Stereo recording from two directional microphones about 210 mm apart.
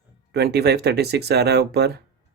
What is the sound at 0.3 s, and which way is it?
Speech, 50° right (ahead or behind).